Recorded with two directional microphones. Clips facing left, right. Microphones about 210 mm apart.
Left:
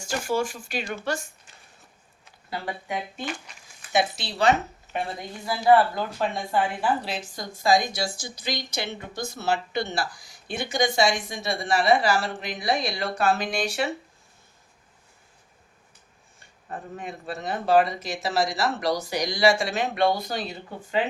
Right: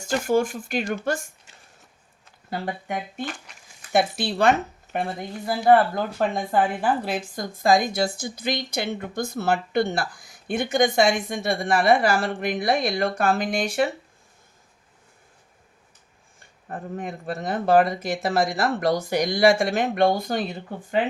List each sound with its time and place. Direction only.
0.1 s speech: 55° right (ahead or behind)
2.5 s speech: 50° right (ahead or behind)
16.6 s speech: 50° right (ahead or behind)